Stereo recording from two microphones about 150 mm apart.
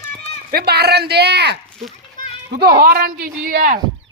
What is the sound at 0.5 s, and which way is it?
Speech, 90° right.